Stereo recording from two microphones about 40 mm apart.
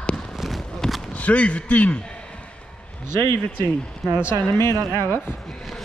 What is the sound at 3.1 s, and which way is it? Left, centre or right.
Speech, left.